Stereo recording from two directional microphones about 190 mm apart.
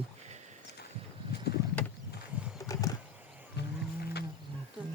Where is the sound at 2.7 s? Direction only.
20° left (ahead or behind).